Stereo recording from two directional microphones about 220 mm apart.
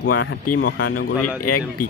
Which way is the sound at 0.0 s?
75° left (ahead or behind).